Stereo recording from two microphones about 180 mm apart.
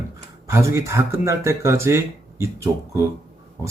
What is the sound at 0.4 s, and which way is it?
Speech, 15° right (ahead or behind).